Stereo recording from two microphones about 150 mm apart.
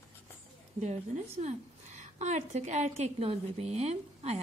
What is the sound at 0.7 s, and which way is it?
A woman's voice, 50° right (ahead or behind).